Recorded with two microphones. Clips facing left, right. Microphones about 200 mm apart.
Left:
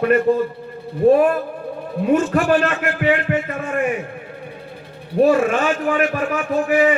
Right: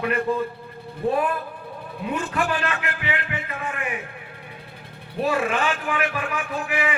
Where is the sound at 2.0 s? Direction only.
45° left (ahead or behind).